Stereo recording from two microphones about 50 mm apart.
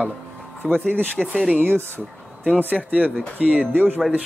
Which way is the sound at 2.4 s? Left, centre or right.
Right.